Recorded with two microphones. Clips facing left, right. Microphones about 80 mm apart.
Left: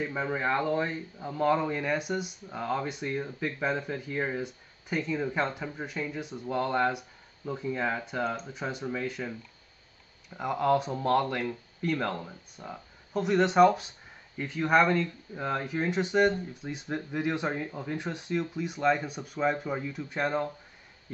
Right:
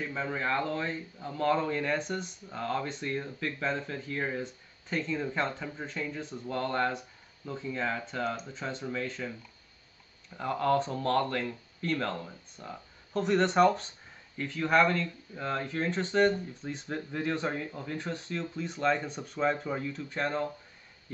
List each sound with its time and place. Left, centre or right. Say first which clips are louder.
0.0 s a man's voice: left 3 dB; centre
10.3 s a man's voice: left 2 dB; centre